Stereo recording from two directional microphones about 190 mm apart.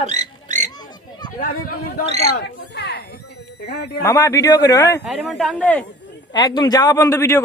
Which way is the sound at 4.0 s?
15° left (ahead or behind).